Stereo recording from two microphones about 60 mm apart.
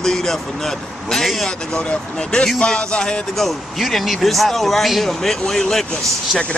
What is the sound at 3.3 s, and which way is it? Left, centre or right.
Speech, centre.